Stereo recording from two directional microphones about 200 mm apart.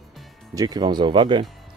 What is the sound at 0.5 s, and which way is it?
Speech, 20° right (ahead or behind).